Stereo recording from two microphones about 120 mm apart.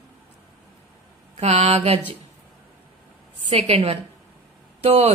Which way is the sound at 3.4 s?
60° right (ahead or behind).